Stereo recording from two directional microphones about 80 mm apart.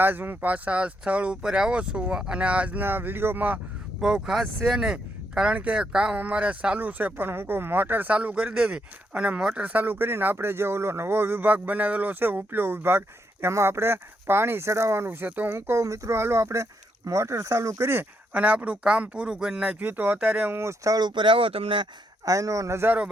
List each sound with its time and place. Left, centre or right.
0.0 s speech: right
4.0 s speech: centre; by 18.0 s right
18.3 s speech: centre
19.8 s speech: right
20.6 s speech: right
20.9 s speech: right
22.3 s speech: right